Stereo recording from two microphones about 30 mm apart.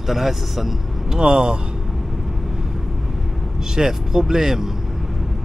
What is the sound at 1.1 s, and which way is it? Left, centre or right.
Speech, right.